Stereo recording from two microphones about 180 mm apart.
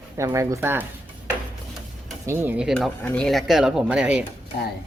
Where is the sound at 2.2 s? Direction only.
15° right (ahead or behind).